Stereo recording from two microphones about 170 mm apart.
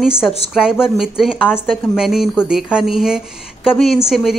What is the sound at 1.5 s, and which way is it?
Speech, 10° left (ahead or behind).